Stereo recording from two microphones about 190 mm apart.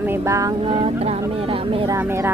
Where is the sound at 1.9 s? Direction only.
15° right (ahead or behind).